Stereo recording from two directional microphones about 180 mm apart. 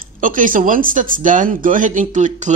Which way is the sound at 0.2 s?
50° right (ahead or behind).